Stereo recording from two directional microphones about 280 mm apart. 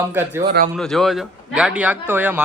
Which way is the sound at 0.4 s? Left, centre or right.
Right.